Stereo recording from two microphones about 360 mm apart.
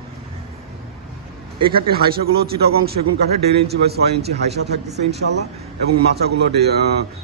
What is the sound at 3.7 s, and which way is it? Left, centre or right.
A man's voice, right.